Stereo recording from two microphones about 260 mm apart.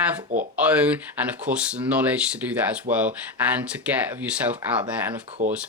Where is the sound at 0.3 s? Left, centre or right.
Right.